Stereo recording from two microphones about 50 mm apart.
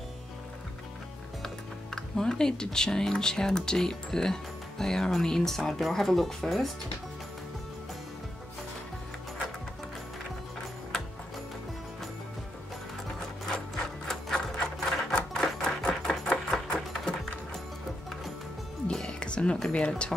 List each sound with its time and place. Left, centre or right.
1.4 s speech: centre
13.5 s sewing machine: centre
16.1 s a sound: centre
18.9 s music: centre